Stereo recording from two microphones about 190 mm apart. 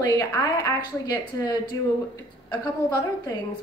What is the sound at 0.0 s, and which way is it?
A woman's voice, 20° left (ahead or behind).